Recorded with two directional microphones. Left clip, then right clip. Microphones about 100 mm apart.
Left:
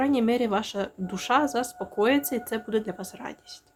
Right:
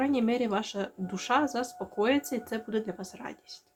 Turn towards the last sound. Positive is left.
turn(degrees=40)  # may be behind; listen again after turning